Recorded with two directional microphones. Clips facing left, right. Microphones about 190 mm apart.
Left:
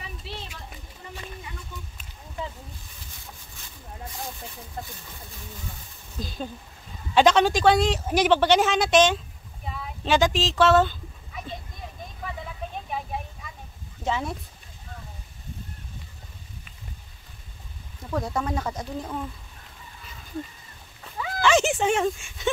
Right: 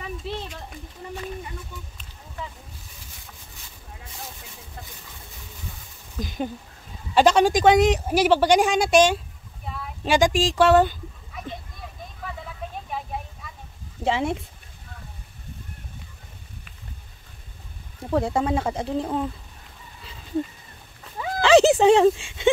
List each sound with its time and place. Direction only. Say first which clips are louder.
6.1 s speech: right 5 dB; 15° right (ahead or behind)
8.1 s speech: left 2 dB; 5° right (ahead or behind)
14.0 s speech: right 4 dB; 25° right (ahead or behind)
18.1 s speech: right 5 dB; 30° right (ahead or behind)
21.2 s a sound: right 6 dB; 35° right (ahead or behind)